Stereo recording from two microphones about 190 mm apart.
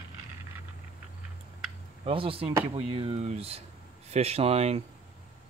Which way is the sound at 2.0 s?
30° right (ahead or behind).